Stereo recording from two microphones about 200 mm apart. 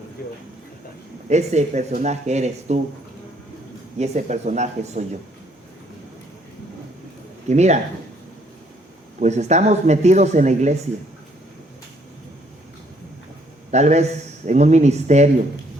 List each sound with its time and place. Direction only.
0.2 s a sound: 45° left (ahead or behind)
1.3 s a man's voice: 35° right (ahead or behind)
3.9 s a man's voice: 35° right (ahead or behind)
7.4 s a man's voice: 35° right (ahead or behind)
9.2 s a man's voice: 35° right (ahead or behind)
13.7 s a man's voice: 35° right (ahead or behind)